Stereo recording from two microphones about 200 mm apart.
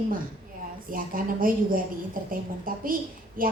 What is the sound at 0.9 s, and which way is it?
A woman's voice, 45° right (ahead or behind).